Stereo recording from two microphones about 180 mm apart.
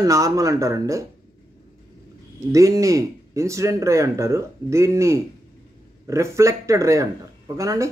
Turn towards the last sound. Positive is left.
turn(degrees=-15)  # may be behind; listen again after turning